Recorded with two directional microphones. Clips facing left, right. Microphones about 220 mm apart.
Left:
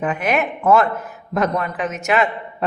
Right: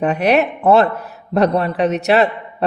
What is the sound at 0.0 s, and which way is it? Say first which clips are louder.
A man's voice: right 5 dB; 35° right (ahead or behind).